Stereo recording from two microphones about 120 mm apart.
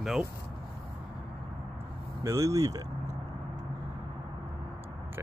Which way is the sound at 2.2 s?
25° right (ahead or behind).